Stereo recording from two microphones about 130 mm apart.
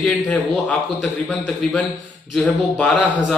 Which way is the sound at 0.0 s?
5° left (ahead or behind).